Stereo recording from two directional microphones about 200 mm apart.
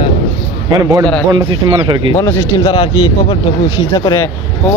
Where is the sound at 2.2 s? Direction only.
20° left (ahead or behind).